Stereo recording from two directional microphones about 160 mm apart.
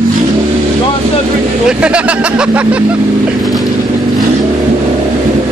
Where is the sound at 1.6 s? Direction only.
5° right (ahead or behind).